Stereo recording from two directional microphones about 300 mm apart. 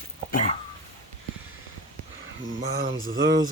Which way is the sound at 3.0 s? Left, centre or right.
Right.